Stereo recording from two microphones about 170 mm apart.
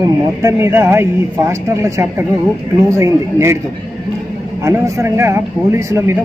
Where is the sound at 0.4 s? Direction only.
15° right (ahead or behind).